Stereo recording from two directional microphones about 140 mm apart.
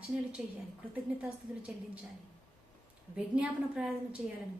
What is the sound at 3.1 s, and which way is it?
Speech, 5° right (ahead or behind).